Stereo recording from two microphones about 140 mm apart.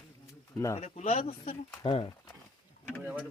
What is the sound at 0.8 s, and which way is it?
Speech, 50° left (ahead or behind).